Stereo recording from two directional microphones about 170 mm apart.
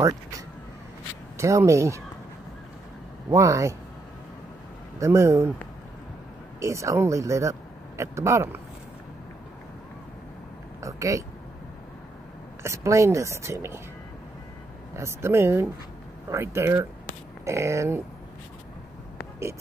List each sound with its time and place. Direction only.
1.4 s speech: 15° right (ahead or behind)
3.3 s speech: 20° right (ahead or behind)
5.0 s speech: 15° right (ahead or behind)
6.6 s speech: 15° right (ahead or behind)
10.8 s speech: 20° right (ahead or behind)
12.6 s speech: 15° right (ahead or behind)
15.0 s speech: 15° right (ahead or behind)